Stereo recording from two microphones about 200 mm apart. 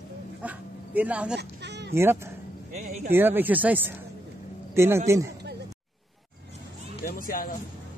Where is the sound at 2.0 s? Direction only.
10° right (ahead or behind).